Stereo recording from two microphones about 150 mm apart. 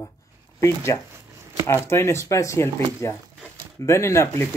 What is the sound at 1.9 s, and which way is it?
Speech, 15° left (ahead or behind).